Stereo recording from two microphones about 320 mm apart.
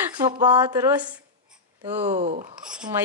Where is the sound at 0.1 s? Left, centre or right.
Centre.